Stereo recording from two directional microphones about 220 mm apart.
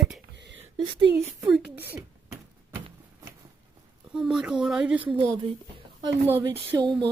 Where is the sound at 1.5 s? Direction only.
5° right (ahead or behind).